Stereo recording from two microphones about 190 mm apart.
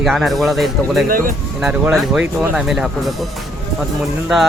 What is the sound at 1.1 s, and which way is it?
Speech, 50° right (ahead or behind).